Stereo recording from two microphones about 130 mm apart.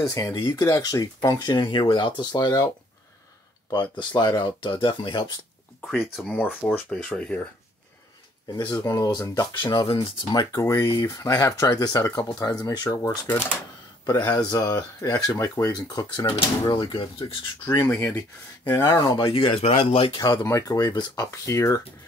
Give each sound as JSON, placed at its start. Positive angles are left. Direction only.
{"t": 0.0, "sound": "speech", "side_deg": 25}
{"t": 4.0, "sound": "speech", "side_deg": 35}
{"t": 5.8, "sound": "speech", "side_deg": 0}
{"t": 6.3, "sound": "speech", "side_deg": 15}
{"t": 8.5, "sound": "speech", "side_deg": 30}
{"t": 9.6, "sound": "speech", "side_deg": 35}
{"t": 13.3, "sound": "speech", "side_deg": 15}
{"t": 14.0, "sound": "speech", "side_deg": 30}
{"t": 16.3, "sound": "speech", "side_deg": 40}
{"t": 17.6, "sound": "speech", "side_deg": 20}
{"t": 20.4, "sound": "speech", "side_deg": 25}